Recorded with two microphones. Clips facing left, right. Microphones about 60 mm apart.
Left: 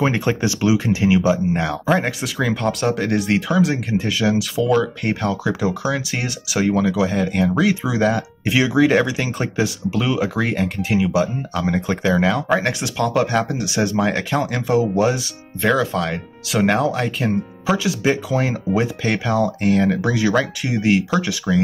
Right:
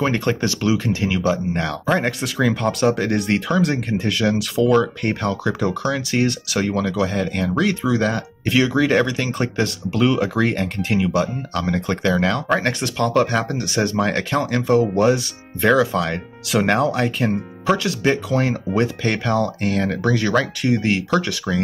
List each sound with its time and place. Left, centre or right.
0.0 s speech: centre